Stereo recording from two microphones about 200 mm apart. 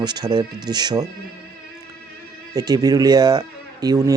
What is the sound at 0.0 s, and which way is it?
Speech, 20° right (ahead or behind).